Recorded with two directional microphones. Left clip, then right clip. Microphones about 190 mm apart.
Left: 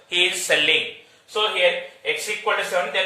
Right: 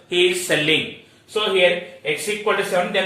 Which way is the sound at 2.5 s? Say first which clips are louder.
Right 2 dB; 20° left (ahead or behind).